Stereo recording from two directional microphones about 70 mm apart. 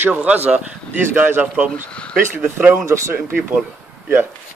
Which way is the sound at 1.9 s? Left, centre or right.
Centre.